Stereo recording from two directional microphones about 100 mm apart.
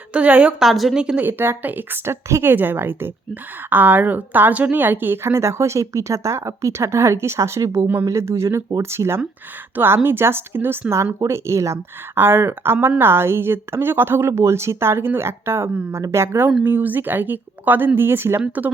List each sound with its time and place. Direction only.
0.1 s a woman's voice: 15° right (ahead or behind)
0.6 s a woman's voice: centre (ahead or behind); by 18.7 s 15° right (ahead or behind)